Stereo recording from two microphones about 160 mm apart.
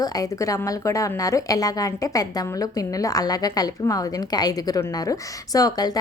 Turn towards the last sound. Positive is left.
turn(degrees=25)  # may be behind; listen again after turning